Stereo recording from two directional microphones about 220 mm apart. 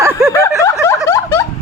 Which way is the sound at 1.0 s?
15° left (ahead or behind).